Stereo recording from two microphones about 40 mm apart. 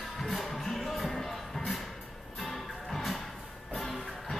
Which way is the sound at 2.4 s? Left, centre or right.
Centre.